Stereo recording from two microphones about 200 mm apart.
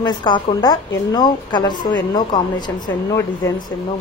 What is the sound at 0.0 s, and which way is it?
Speech, 25° left (ahead or behind).